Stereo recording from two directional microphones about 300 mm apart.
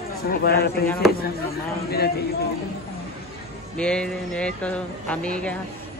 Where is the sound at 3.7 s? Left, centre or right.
Centre.